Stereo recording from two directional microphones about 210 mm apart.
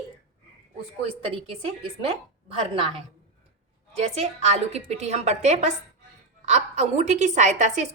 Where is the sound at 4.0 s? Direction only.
30° right (ahead or behind).